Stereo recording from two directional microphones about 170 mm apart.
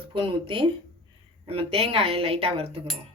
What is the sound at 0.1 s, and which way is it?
Speech, 30° right (ahead or behind).